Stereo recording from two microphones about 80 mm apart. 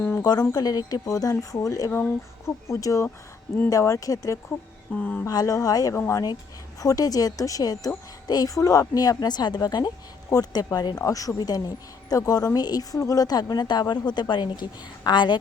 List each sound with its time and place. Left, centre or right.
0.2 s a woman's voice: left
4.9 s speech: centre
5.3 s a woman's voice: left
5.9 s speech: left
6.7 s a woman's voice: left
11.0 s a woman's voice: left